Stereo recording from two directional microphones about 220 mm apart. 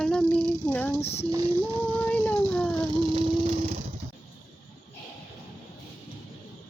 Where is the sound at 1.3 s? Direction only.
15° right (ahead or behind).